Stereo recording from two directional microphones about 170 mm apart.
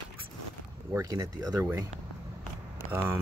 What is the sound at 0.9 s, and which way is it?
Speech, 20° right (ahead or behind).